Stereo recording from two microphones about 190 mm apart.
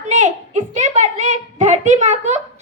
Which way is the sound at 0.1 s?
35° right (ahead or behind).